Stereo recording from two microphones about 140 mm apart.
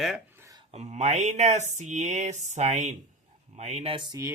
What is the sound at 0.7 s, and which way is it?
Speech, 55° right (ahead or behind).